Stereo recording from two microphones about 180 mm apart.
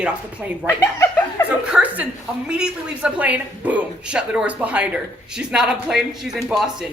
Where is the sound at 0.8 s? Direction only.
15° left (ahead or behind).